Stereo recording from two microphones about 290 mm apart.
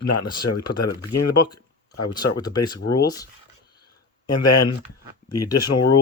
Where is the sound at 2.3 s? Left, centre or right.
Centre.